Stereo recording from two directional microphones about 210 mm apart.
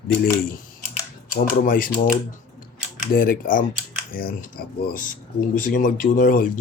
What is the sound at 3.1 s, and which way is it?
Speech, 40° left (ahead or behind).